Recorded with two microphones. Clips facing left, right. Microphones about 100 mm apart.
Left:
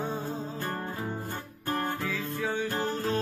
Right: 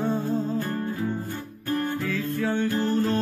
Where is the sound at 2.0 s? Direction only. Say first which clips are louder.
Right 5 dB; 10° left (ahead or behind).